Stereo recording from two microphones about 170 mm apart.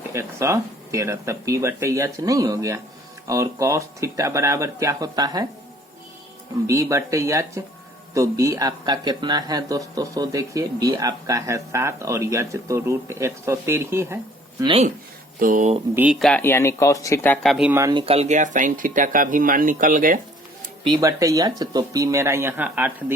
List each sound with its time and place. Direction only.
0.1 s speech: 15° right (ahead or behind)
6.7 s a man's voice: 15° right (ahead or behind)
14.6 s speech: 30° right (ahead or behind)
15.4 s speech: 50° right (ahead or behind)
16.0 s speech: 10° right (ahead or behind)
16.2 s speech: 10° left (ahead or behind)
17.7 s speech: 15° right (ahead or behind)
17.9 s speech: 35° right (ahead or behind); by 20.1 s 55° right (ahead or behind)
20.8 s a man's voice: 20° right (ahead or behind)